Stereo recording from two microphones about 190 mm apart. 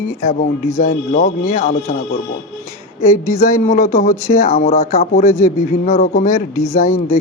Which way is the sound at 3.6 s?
35° left (ahead or behind).